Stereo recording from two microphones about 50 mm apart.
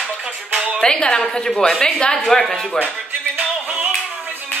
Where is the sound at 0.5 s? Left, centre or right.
Right.